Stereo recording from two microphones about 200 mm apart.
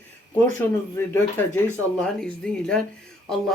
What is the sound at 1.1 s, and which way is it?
Speech, 10° left (ahead or behind).